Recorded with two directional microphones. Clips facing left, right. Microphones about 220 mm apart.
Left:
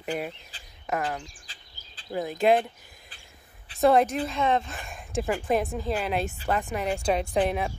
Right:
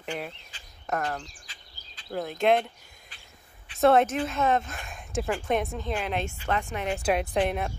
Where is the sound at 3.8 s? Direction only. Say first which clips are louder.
Even; centre (ahead or behind).